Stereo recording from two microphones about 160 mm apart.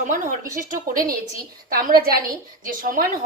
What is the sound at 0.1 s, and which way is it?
A woman's voice, 55° right (ahead or behind).